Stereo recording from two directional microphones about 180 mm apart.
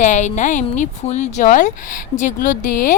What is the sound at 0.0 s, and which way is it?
Speech, 40° left (ahead or behind).